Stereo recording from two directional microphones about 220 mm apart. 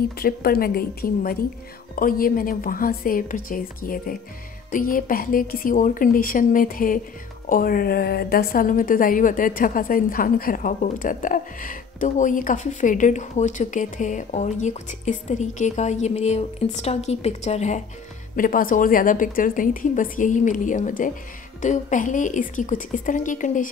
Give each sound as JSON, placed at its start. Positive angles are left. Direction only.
{"t": 0.2, "sound": "a woman's voice", "side_deg": 45}